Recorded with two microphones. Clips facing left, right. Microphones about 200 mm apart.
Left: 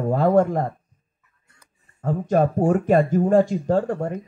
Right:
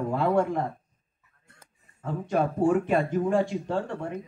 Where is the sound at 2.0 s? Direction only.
40° left (ahead or behind).